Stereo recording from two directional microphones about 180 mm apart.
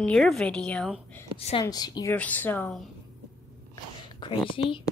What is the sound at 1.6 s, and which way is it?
Speech, 20° left (ahead or behind).